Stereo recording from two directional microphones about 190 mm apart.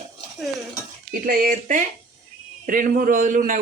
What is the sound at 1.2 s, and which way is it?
A man's voice, 45° right (ahead or behind).